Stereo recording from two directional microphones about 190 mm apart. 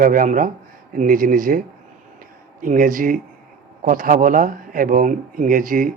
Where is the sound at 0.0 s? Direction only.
45° right (ahead or behind).